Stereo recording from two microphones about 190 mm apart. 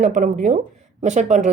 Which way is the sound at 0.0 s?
40° right (ahead or behind).